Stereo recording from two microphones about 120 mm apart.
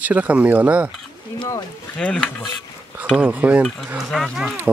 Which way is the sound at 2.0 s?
5° left (ahead or behind).